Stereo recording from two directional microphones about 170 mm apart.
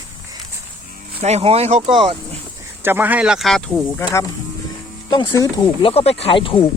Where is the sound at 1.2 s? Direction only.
40° right (ahead or behind).